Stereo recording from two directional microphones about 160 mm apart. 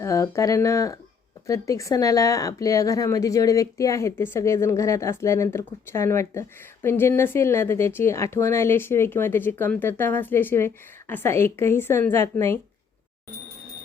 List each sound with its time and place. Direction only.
0.0 s speech: 20° left (ahead or behind)